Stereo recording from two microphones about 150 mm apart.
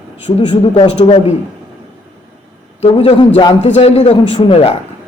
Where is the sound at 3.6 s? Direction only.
45° left (ahead or behind).